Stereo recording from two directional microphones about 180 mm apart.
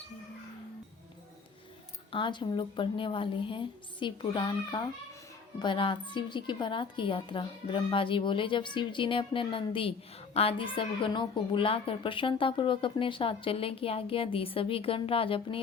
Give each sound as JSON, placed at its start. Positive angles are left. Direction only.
{"t": 2.1, "sound": "a woman's voice", "side_deg": 25}